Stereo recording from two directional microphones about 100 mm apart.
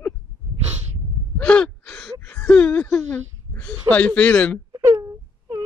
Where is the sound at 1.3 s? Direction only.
10° left (ahead or behind).